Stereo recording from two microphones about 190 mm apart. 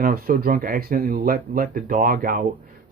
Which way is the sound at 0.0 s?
50° right (ahead or behind).